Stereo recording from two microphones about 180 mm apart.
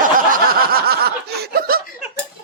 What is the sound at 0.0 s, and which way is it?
Snicker, 55° right (ahead or behind).